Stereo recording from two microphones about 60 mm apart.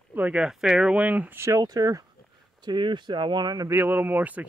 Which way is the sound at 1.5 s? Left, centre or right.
Right.